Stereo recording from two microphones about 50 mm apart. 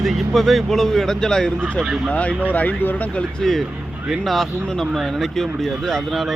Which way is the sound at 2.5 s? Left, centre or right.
Left.